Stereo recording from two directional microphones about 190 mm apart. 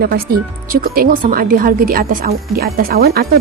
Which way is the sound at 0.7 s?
50° right (ahead or behind).